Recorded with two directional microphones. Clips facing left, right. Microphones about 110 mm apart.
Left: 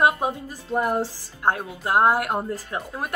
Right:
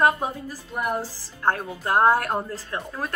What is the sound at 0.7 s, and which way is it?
Speech, 30° left (ahead or behind).